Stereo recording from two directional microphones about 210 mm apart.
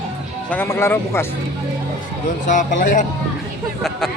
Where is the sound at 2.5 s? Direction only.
35° left (ahead or behind).